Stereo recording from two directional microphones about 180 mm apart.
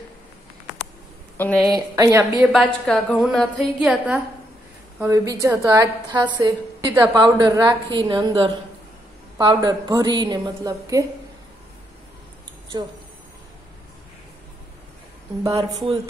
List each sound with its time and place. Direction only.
1.4 s a woman's voice: 10° left (ahead or behind)
1.7 s a woman's voice: 20° right (ahead or behind)
2.5 s a woman's voice: centre (ahead or behind)
5.0 s a woman's voice: 20° right (ahead or behind)